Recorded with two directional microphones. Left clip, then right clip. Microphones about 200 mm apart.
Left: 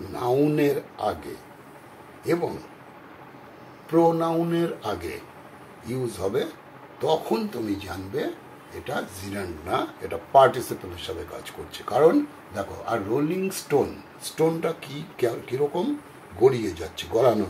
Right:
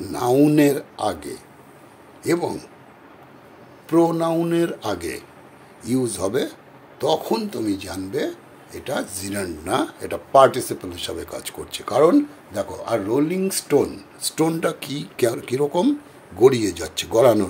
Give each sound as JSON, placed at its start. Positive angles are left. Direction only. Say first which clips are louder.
{"t": 0.1, "sound": "speech", "louder": "right 5 dB", "side_deg": -65}
{"t": 2.2, "sound": "speech", "louder": "right 3 dB", "side_deg": -65}
{"t": 3.9, "sound": "speech", "louder": "right 2 dB", "side_deg": -55}